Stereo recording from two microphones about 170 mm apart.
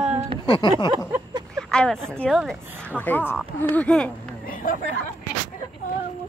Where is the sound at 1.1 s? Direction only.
15° right (ahead or behind).